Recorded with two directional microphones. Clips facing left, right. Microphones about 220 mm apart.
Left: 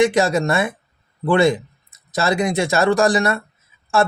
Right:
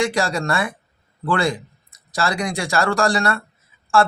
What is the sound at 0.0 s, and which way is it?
Speech, 20° left (ahead or behind).